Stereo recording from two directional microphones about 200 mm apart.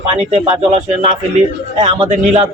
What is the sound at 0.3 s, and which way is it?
Speech, 30° right (ahead or behind).